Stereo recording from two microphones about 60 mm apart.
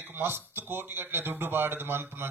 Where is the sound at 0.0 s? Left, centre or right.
Right.